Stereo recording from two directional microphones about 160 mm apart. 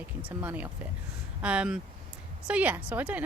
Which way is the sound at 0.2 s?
10° right (ahead or behind).